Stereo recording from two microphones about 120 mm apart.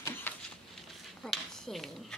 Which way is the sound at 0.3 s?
15° left (ahead or behind).